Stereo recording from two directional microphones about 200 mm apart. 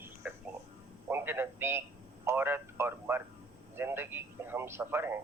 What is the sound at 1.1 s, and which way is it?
A man's voice, 10° right (ahead or behind).